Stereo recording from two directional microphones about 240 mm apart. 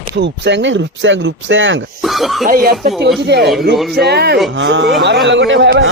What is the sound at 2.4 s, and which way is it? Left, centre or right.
Speech, right.